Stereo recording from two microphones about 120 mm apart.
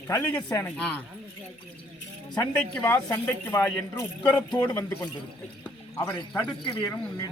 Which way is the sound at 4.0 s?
25° left (ahead or behind).